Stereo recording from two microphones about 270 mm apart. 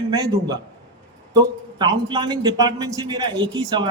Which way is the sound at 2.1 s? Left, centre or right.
Centre.